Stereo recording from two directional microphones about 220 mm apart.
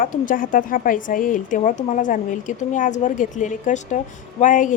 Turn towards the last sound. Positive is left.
turn(degrees=35)  # may be behind; listen again after turning